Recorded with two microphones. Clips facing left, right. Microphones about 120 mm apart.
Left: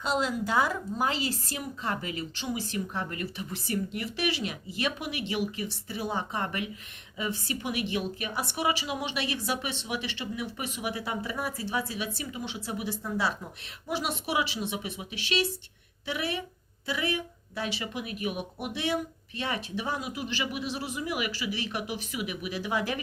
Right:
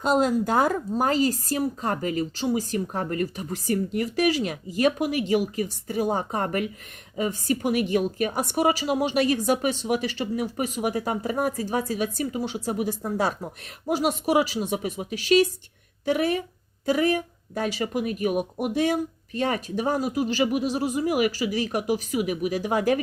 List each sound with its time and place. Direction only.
0.0 s a woman's voice: 45° right (ahead or behind)